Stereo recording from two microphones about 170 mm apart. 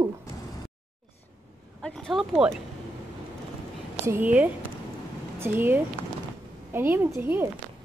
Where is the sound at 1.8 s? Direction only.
Centre (ahead or behind).